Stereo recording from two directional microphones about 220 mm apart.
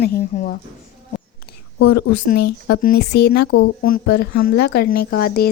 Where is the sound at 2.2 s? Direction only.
50° left (ahead or behind).